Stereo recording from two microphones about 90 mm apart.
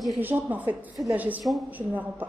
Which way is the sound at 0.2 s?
20° right (ahead or behind).